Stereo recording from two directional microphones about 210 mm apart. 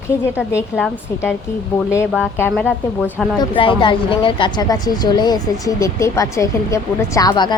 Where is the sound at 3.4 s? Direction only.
25° left (ahead or behind).